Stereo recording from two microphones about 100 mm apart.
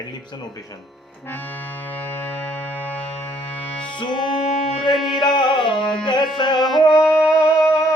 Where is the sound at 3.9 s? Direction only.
50° left (ahead or behind).